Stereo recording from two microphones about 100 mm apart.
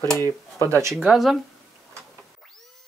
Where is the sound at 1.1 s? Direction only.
Centre (ahead or behind).